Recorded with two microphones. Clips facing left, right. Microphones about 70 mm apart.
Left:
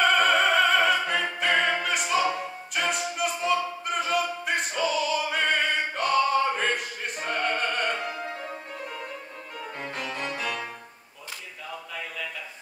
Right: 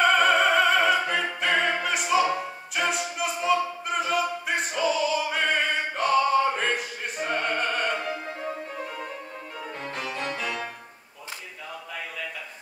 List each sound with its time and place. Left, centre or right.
0.0 s opera: centre
9.9 s music: centre